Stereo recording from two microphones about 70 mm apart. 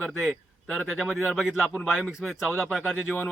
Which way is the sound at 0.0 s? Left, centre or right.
Centre.